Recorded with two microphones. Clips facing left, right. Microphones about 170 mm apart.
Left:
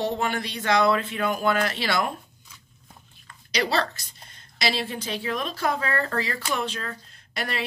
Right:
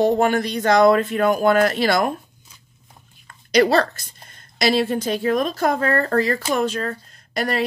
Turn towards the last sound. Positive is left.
turn(degrees=-45)  # may be behind; listen again after turning